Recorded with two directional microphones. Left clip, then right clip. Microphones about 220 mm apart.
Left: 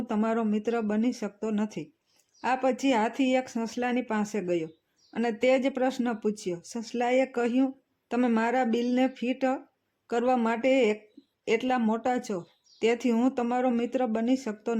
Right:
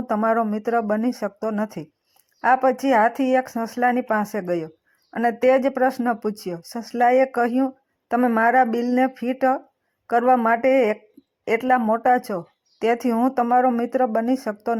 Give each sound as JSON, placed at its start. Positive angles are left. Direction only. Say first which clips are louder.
{"t": 0.1, "sound": "speech", "louder": "right 9 dB", "side_deg": -10}
{"t": 6.7, "sound": "speech", "louder": "right 12 dB", "side_deg": -20}
{"t": 7.1, "sound": "speech", "louder": "right 5 dB", "side_deg": -10}